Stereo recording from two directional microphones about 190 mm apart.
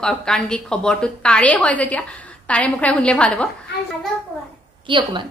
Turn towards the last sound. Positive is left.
turn(degrees=-25)  # may be behind; listen again after turning